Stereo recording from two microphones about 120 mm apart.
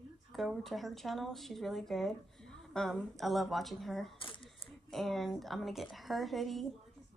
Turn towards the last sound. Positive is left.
turn(degrees=0)  # may be behind; listen again after turning